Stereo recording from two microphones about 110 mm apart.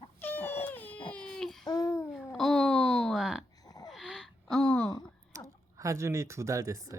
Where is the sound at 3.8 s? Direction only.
Centre (ahead or behind).